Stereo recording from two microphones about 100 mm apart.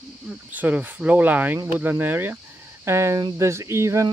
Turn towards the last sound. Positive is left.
turn(degrees=-30)  # may be behind; listen again after turning